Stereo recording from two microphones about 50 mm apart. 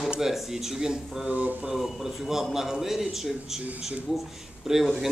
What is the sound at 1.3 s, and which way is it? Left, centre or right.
Mantra, right.